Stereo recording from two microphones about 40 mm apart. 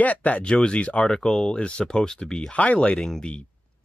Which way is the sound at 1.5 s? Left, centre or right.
Left.